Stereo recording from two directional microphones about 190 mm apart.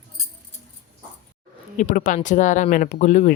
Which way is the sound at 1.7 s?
45° left (ahead or behind).